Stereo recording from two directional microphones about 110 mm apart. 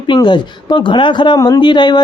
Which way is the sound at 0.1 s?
45° left (ahead or behind).